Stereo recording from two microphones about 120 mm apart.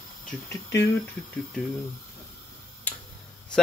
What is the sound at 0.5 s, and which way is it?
Speech, 25° left (ahead or behind).